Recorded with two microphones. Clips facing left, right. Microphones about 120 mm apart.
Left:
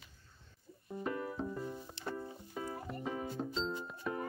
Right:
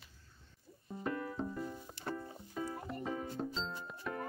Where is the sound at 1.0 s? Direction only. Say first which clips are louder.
Even; 10° left (ahead or behind).